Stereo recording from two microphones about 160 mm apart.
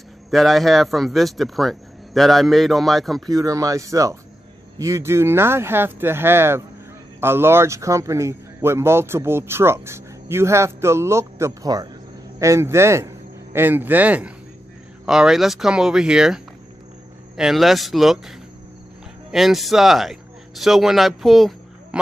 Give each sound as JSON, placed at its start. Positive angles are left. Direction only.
{"t": 0.3, "sound": "speech", "side_deg": 0}
{"t": 3.3, "sound": "a man's voice", "side_deg": -20}
{"t": 17.4, "sound": "speech", "side_deg": 0}
{"t": 19.3, "sound": "speech", "side_deg": 0}